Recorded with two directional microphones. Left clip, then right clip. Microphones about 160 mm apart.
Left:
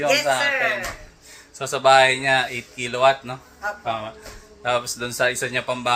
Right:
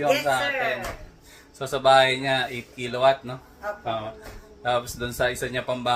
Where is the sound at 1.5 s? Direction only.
10° left (ahead or behind).